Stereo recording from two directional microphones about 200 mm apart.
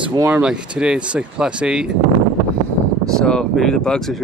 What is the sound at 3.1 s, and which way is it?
Speech, 5° left (ahead or behind).